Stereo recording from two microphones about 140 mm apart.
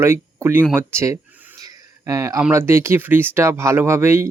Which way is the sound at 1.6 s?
20° right (ahead or behind).